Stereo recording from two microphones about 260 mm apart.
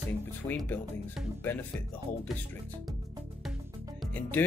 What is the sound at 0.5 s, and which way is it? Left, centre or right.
Speech, centre.